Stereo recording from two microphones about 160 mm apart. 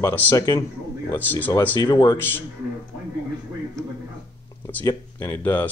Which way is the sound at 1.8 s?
30° left (ahead or behind).